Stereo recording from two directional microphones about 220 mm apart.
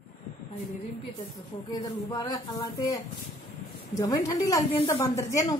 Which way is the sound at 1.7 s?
15° left (ahead or behind).